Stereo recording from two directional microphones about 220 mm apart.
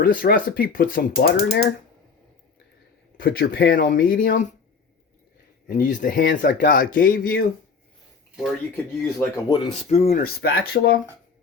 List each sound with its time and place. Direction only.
0.0 s speech: 40° left (ahead or behind)
3.2 s speech: 45° left (ahead or behind)
5.6 s speech: 40° left (ahead or behind)
8.4 s speech: 10° left (ahead or behind)
9.7 s speech: 30° left (ahead or behind)
10.2 s speech: 45° left (ahead or behind)